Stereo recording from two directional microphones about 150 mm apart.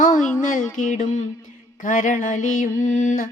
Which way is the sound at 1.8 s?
60° left (ahead or behind).